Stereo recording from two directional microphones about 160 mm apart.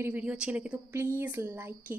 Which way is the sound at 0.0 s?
10° right (ahead or behind).